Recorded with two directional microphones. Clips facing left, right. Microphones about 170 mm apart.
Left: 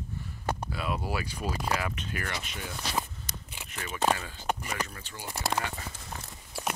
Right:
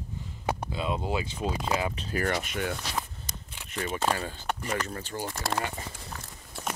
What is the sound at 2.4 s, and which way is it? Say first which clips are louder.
Speech: right 8 dB; 60° right (ahead or behind).